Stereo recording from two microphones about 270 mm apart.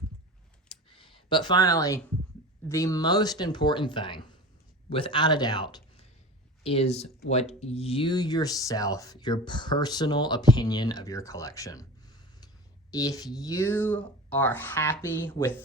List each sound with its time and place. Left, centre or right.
0.9 s a sound: centre
2.6 s a man's voice: centre
12.9 s speech: centre